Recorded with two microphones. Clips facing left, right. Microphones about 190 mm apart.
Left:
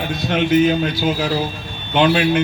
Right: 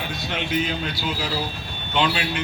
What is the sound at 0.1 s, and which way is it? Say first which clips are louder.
A man's voice: left 12 dB; 50° left (ahead or behind).